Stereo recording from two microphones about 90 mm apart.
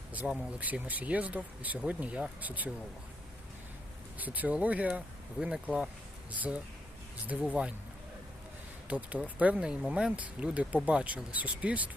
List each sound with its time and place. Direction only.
0.3 s speech: 20° right (ahead or behind)
4.2 s speech: 15° right (ahead or behind)
7.3 s speech: 15° right (ahead or behind)
8.9 s speech: 15° right (ahead or behind)